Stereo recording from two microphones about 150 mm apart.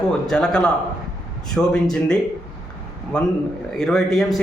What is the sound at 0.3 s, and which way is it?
A man's voice, 5° left (ahead or behind).